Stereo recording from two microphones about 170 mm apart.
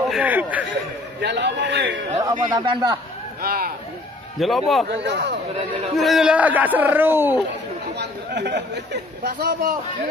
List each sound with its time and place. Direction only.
0.1 s speech: 10° right (ahead or behind)
1.2 s a man's voice: 90° right
2.5 s a man's voice: 25° right (ahead or behind)
3.4 s speech: 60° right (ahead or behind)
4.4 s a man's voice: centre (ahead or behind)
4.8 s speech: 90° right
5.9 s speech: centre (ahead or behind)
8.0 s speech: 80° right; by 9.8 s 60° right (ahead or behind)